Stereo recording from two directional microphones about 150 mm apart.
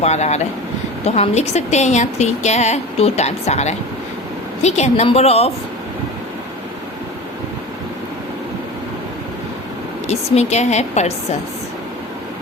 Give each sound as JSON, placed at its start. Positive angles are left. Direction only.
{"t": 0.0, "sound": "a woman's voice", "side_deg": 50}
{"t": 10.1, "sound": "a woman's voice", "side_deg": 45}